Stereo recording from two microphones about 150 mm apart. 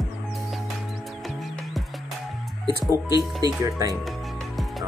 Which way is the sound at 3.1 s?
25° left (ahead or behind).